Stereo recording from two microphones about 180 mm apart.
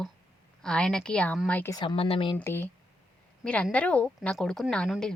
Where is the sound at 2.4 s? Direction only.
10° left (ahead or behind).